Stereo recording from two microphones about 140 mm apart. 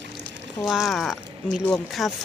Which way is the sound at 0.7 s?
Centre (ahead or behind).